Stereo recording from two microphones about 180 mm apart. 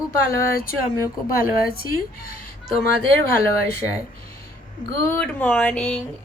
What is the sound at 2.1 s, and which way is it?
Speech, 55° left (ahead or behind).